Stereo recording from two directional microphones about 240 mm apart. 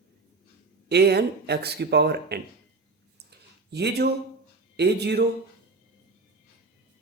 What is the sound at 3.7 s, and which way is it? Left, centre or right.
Speech, right.